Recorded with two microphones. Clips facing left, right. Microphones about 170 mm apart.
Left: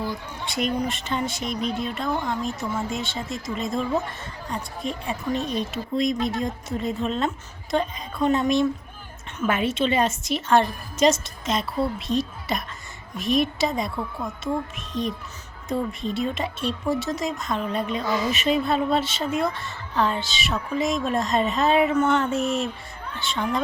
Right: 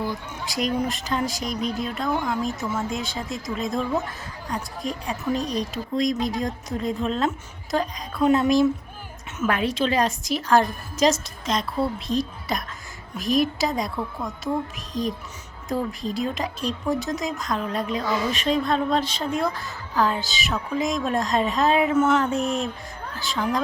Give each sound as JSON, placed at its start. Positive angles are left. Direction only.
{"t": 0.4, "sound": "speech", "side_deg": 0}